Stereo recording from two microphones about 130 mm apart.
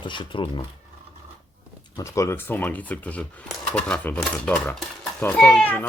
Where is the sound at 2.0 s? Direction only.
25° left (ahead or behind).